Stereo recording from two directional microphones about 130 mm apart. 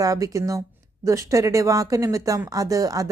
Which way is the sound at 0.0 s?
25° right (ahead or behind).